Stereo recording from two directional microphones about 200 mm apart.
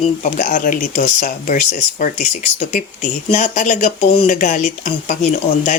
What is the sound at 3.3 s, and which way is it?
Speech, 35° left (ahead or behind).